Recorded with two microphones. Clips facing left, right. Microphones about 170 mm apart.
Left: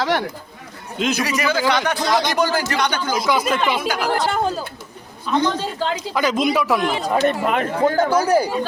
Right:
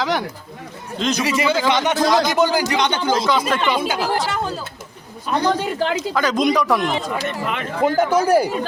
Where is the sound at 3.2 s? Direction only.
10° left (ahead or behind).